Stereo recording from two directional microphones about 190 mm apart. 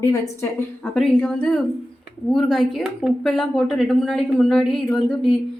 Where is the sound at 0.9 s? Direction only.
5° left (ahead or behind).